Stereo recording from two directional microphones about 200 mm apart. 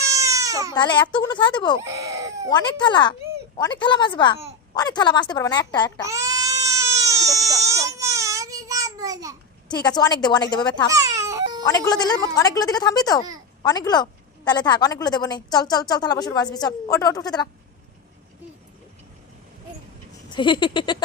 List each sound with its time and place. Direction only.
0.1 s baby cry: 15° right (ahead or behind)
0.7 s a woman's voice: 20° left (ahead or behind)
1.8 s baby cry: 15° right (ahead or behind)
2.5 s a woman's voice: 20° left (ahead or behind)
6.1 s baby cry: 15° right (ahead or behind)
9.8 s a woman's voice: 20° left (ahead or behind)
10.9 s baby cry: 15° right (ahead or behind)
11.9 s a woman's voice: 20° left (ahead or behind)
20.3 s a woman's voice: 25° left (ahead or behind)